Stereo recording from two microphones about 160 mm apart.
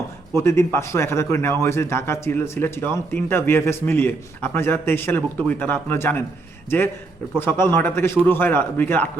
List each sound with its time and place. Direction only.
0.3 s speech: 15° left (ahead or behind)